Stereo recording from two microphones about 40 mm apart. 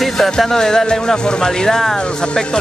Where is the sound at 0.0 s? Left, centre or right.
Centre.